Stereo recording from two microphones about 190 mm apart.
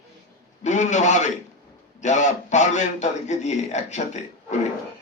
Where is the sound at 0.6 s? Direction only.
40° left (ahead or behind).